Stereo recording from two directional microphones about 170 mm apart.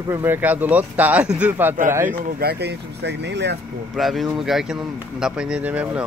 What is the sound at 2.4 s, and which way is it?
Speech, 75° right (ahead or behind).